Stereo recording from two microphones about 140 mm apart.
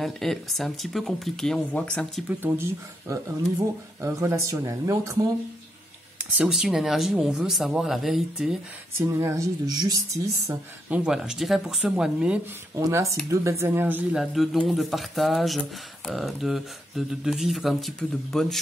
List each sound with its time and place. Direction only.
0.0 s speech: centre (ahead or behind)
2.2 s speech: 15° right (ahead or behind)
6.1 s speech: 10° right (ahead or behind)
9.0 s speech: 20° right (ahead or behind)
10.9 s speech: 5° right (ahead or behind)
12.7 s speech: 20° right (ahead or behind)
14.2 s speech: centre (ahead or behind)